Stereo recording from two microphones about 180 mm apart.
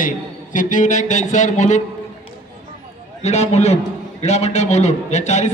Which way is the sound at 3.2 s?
35° left (ahead or behind).